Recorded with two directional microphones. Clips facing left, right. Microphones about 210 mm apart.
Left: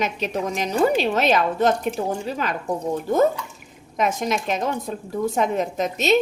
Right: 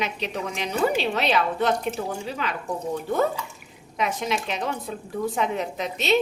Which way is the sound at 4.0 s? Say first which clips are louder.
Left 4 dB; 45° left (ahead or behind).